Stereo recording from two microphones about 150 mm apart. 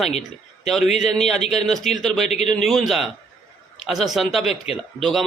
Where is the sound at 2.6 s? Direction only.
Centre (ahead or behind).